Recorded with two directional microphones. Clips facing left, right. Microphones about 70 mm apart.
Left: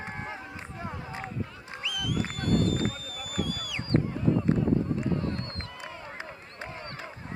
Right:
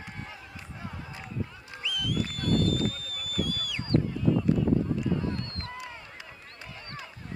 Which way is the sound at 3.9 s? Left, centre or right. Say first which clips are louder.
Even; left.